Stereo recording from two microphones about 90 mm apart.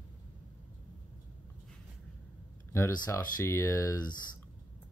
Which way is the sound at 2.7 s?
30° left (ahead or behind).